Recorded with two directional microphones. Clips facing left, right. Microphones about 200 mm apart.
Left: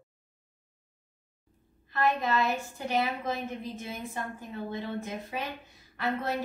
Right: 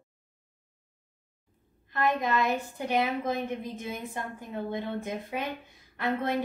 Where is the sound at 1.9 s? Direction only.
15° right (ahead or behind).